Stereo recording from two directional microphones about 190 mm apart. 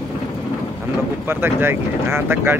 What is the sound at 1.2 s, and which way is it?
Speech, 10° right (ahead or behind).